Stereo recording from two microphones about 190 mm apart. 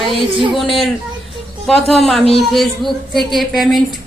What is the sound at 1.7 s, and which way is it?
A woman's voice, centre (ahead or behind).